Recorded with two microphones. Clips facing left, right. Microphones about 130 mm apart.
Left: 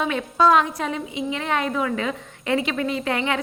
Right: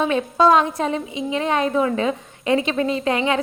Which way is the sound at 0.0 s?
25° right (ahead or behind).